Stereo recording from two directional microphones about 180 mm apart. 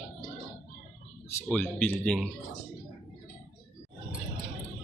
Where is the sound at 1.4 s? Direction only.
10° left (ahead or behind).